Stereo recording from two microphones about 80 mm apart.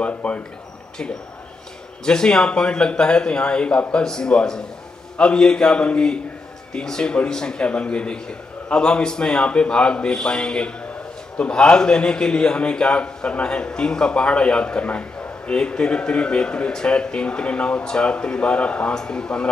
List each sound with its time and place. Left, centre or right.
0.0 s a man's voice: centre
2.0 s a man's voice: centre